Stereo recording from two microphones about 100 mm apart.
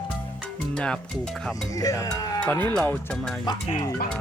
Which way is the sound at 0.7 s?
10° left (ahead or behind).